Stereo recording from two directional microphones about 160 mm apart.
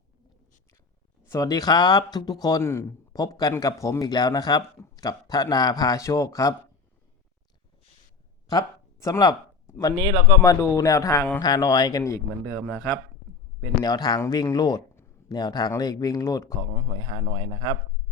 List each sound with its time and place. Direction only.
1.3 s speech: 20° left (ahead or behind)
8.4 s a sound: 20° left (ahead or behind)
10.1 s speech: 20° right (ahead or behind)
10.4 s speech: 20° left (ahead or behind)
12.5 s a man's voice: 5° left (ahead or behind)
13.8 s speech: 25° left (ahead or behind)
14.9 s a sound: 20° left (ahead or behind)
15.7 s speech: 25° left (ahead or behind)
16.9 s speech: 30° right (ahead or behind)